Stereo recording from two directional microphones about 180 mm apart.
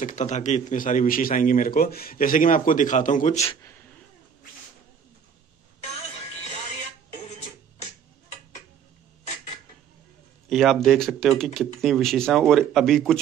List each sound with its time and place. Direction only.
0.0 s a man's voice: 45° left (ahead or behind)
10.5 s speech: centre (ahead or behind)